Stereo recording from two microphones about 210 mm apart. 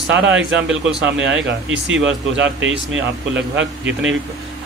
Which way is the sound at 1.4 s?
60° right (ahead or behind).